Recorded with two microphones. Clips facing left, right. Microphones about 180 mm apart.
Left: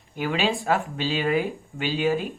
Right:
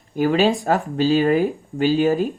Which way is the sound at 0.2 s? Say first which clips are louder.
Right 8 dB; 40° right (ahead or behind).